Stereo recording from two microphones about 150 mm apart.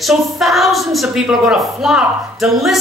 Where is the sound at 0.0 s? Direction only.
Centre (ahead or behind).